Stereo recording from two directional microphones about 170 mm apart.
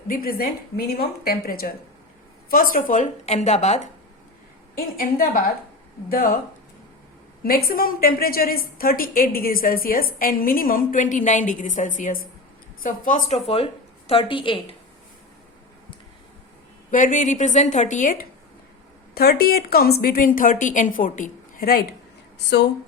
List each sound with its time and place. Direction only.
0.1 s a woman's voice: 60° left (ahead or behind); by 3.8 s 40° left (ahead or behind)
4.9 s a woman's voice: 55° left (ahead or behind)
7.4 s a woman's voice: 60° left (ahead or behind); by 14.6 s 30° left (ahead or behind)
16.9 s a woman's voice: 50° left (ahead or behind)
19.1 s a woman's voice: 65° left (ahead or behind)